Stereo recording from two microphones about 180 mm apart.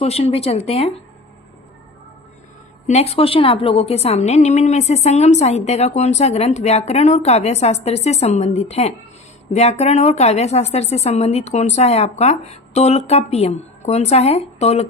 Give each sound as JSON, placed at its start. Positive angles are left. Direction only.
{"t": 0.0, "sound": "a woman's voice", "side_deg": 35}
{"t": 2.8, "sound": "a woman's voice", "side_deg": 35}